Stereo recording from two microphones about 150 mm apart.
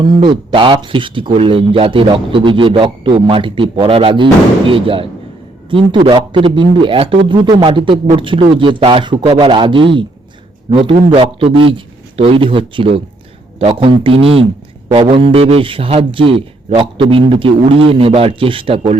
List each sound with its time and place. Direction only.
0.0 s speech: 30° right (ahead or behind)